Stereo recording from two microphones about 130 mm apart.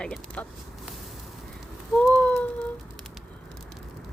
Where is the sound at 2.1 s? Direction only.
10° left (ahead or behind).